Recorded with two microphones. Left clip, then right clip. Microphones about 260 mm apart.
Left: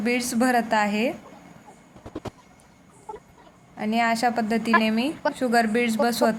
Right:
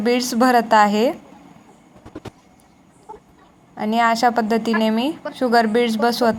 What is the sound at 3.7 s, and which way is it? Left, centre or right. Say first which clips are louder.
A woman's voice: right 6 dB; centre.